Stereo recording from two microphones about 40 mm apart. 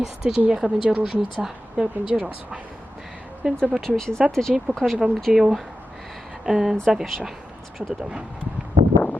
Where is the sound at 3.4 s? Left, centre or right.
Centre.